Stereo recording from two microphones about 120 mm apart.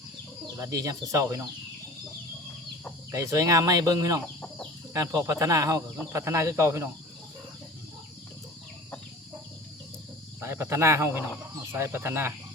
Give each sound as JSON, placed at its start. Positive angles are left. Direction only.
{"t": 0.6, "sound": "speech", "side_deg": -30}
{"t": 3.1, "sound": "speech", "side_deg": -30}
{"t": 4.4, "sound": "chicken", "side_deg": 10}
{"t": 4.9, "sound": "speech", "side_deg": -25}
{"t": 10.4, "sound": "speech", "side_deg": -20}